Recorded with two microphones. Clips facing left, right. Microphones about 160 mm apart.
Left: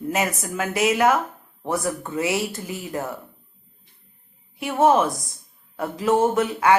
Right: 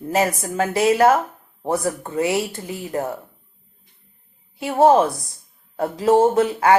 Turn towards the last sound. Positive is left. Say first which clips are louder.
# right 3 dB
turn(degrees=-30)  # may be behind; listen again after turning